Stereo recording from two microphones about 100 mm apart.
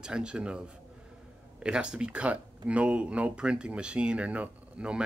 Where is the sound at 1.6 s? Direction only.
10° right (ahead or behind).